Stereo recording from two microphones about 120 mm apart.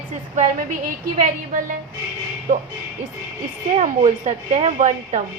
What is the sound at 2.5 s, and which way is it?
Speech, 90° right.